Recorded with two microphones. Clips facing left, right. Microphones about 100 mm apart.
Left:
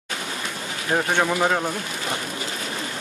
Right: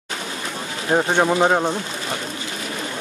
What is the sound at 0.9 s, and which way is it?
Speech, 25° right (ahead or behind).